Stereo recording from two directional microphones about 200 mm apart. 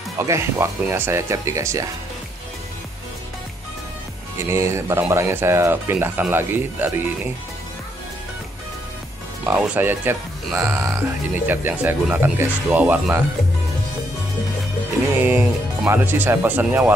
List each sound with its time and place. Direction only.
0.2 s speech: 15° right (ahead or behind)
4.5 s speech: 15° right (ahead or behind)
9.5 s speech: 10° right (ahead or behind)
15.1 s speech: 10° right (ahead or behind)